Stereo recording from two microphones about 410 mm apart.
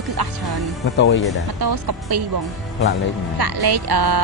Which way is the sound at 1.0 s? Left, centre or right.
Left.